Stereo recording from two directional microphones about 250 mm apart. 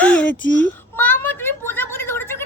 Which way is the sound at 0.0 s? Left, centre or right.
Centre.